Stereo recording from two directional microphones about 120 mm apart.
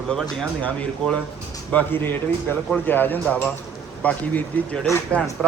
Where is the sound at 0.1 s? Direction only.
5° left (ahead or behind).